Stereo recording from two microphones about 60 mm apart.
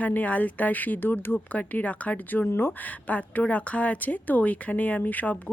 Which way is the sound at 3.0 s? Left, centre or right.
Left.